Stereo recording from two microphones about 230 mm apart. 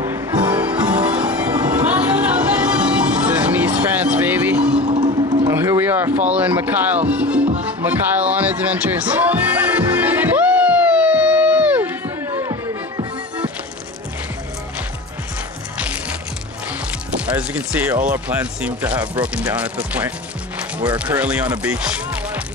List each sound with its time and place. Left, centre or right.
0.0 s music: centre
0.7 s music: centre
1.4 s music: centre
1.7 s music: centre
4.7 s music: centre
5.4 s a sound: centre
6.3 s speech: centre
7.8 s music: centre
15.8 s music: centre
17.3 s speech: centre